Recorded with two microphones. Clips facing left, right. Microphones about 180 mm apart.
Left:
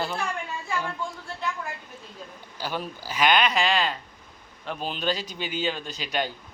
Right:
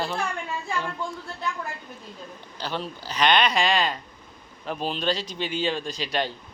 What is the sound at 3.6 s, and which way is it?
Speech, 35° right (ahead or behind).